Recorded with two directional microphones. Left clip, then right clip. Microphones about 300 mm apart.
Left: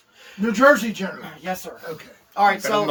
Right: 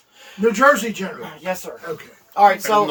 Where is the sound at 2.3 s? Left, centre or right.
Right.